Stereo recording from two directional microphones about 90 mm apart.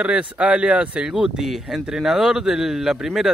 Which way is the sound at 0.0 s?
10° right (ahead or behind).